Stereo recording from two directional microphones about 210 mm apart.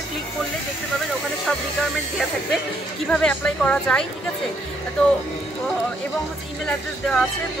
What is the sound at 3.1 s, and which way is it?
Speech, 5° left (ahead or behind).